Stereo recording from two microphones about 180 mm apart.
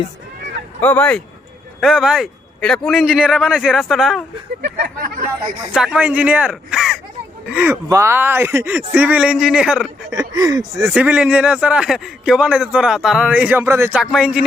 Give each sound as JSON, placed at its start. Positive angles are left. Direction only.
{"t": 0.8, "sound": "a man's voice", "side_deg": 10}
{"t": 4.6, "sound": "speech", "side_deg": -55}
{"t": 5.7, "sound": "a man's voice", "side_deg": -5}
{"t": 7.5, "sound": "speech", "side_deg": -15}
{"t": 10.1, "sound": "speech", "side_deg": -20}
{"t": 10.9, "sound": "a man's voice", "side_deg": -5}